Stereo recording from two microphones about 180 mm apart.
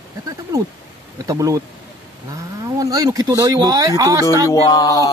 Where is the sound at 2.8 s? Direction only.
20° right (ahead or behind).